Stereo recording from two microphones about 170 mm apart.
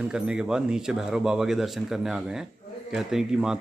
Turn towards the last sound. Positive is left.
turn(degrees=-5)  # may be behind; listen again after turning